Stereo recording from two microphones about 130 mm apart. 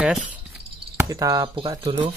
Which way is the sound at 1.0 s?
25° right (ahead or behind).